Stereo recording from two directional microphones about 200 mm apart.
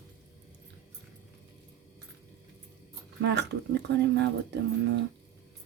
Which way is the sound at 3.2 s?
60° right (ahead or behind).